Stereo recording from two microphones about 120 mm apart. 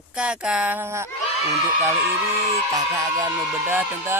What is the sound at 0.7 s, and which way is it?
Speech, 20° right (ahead or behind).